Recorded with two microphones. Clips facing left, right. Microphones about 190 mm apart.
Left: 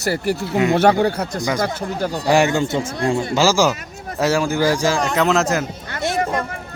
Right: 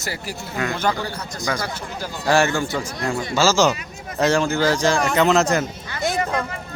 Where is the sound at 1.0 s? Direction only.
60° left (ahead or behind).